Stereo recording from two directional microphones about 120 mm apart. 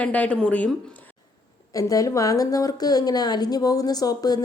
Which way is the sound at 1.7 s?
30° left (ahead or behind).